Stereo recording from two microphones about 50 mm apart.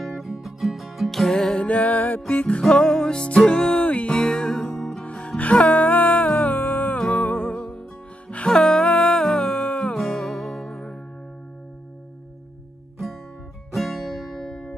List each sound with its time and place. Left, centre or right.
0.0 s music: centre
1.6 s music: left
2.4 s music: left
4.7 s music: centre
5.0 s music: left
10.3 s music: left
13.7 s music: centre